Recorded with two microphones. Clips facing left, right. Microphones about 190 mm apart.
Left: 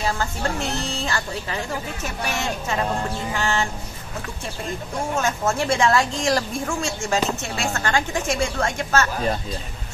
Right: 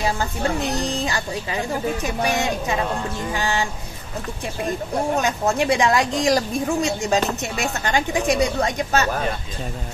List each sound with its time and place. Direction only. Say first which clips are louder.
0.0 s speech: right 2 dB; 15° right (ahead or behind)
5.1 s speech: even; 15° right (ahead or behind)